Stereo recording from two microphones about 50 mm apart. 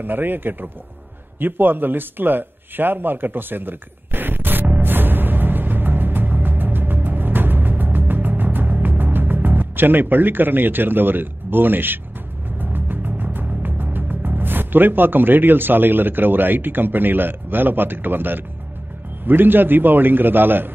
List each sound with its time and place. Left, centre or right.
0.0 s a man's voice: right
1.4 s a sound: right
12.5 s music: right
13.6 s a man's voice: right